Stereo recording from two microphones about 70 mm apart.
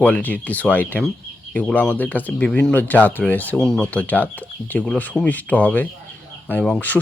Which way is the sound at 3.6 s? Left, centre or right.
Centre.